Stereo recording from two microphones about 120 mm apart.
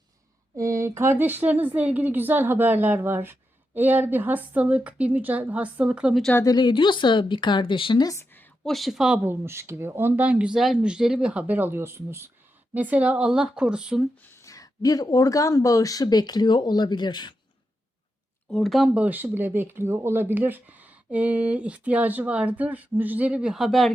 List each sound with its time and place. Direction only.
0.5 s speech: 25° right (ahead or behind); by 6.2 s 10° right (ahead or behind)
6.4 s speech: 35° left (ahead or behind)
8.0 s a sound: 25° left (ahead or behind)
8.6 s speech: centre (ahead or behind)
14.2 s speech: 20° left (ahead or behind); by 17.3 s 35° left (ahead or behind)
18.5 s speech: centre (ahead or behind)
18.9 s speech: 15° right (ahead or behind)